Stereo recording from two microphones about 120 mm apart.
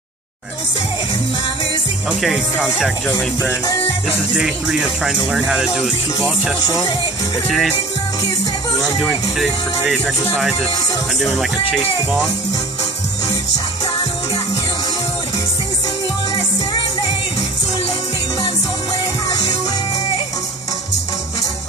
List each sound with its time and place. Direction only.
2.0 s speech: 5° right (ahead or behind)
4.4 s speech: 5° right (ahead or behind)
6.6 s speech: 35° left (ahead or behind)
7.4 s speech: centre (ahead or behind)
8.8 s speech: centre (ahead or behind)